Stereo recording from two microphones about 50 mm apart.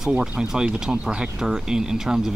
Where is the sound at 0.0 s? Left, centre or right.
Centre.